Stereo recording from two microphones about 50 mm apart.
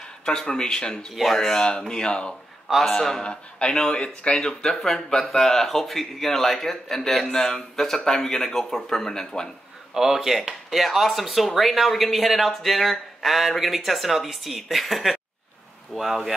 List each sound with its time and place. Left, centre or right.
0.2 s speech: centre
1.1 s speech: centre
9.9 s speech: centre